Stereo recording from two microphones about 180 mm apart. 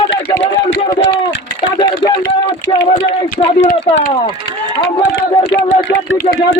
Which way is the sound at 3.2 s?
45° left (ahead or behind).